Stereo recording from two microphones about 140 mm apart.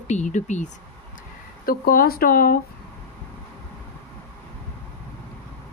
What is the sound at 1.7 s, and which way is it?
Speech, 90° left.